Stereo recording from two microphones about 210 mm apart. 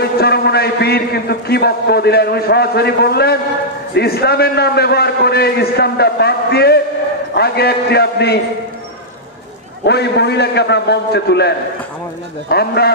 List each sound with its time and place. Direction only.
0.0 s a man's voice: 50° left (ahead or behind)
9.8 s a man's voice: 55° left (ahead or behind)